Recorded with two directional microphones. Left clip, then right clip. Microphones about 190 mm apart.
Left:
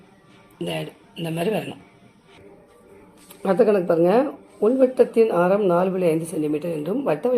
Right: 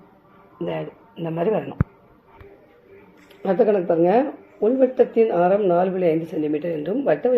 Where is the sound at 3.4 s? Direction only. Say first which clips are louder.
Even; 10° left (ahead or behind).